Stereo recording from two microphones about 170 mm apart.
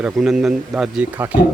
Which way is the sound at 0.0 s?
Centre (ahead or behind).